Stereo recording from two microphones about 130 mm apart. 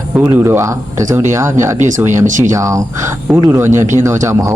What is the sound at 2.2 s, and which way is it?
Speech, 75° right (ahead or behind).